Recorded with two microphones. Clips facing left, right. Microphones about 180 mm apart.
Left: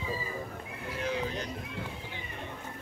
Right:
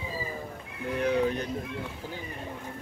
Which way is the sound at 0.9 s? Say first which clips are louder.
Right 7 dB; 60° right (ahead or behind).